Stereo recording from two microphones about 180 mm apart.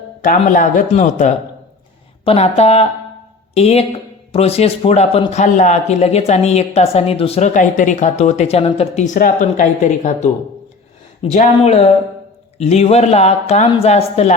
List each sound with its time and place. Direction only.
0.2 s a man's voice: 45° left (ahead or behind)